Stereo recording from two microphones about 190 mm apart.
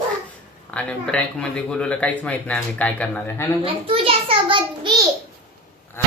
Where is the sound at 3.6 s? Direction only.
30° right (ahead or behind).